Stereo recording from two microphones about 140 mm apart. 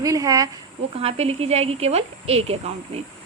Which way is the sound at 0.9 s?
50° right (ahead or behind).